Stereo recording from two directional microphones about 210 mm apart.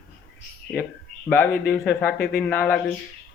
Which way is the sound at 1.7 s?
5° left (ahead or behind).